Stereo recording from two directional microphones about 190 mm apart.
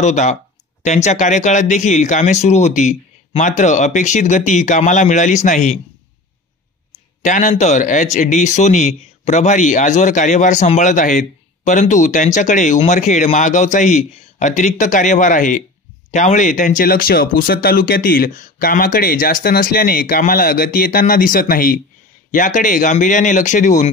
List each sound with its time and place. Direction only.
0.0 s speech: 40° left (ahead or behind)
7.2 s speech: 40° left (ahead or behind)